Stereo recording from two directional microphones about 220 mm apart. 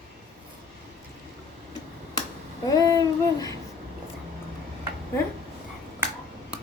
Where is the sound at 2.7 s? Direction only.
15° left (ahead or behind).